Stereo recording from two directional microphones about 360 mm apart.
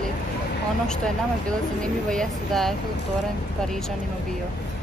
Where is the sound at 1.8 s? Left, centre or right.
Centre.